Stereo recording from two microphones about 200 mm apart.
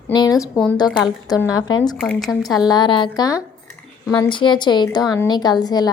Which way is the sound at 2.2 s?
20° left (ahead or behind).